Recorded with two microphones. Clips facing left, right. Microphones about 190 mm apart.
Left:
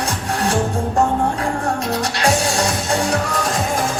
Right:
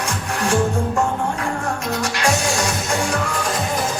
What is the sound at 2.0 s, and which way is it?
Music, 35° left (ahead or behind).